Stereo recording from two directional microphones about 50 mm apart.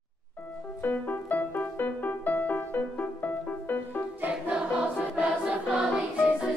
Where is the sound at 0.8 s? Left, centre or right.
Left.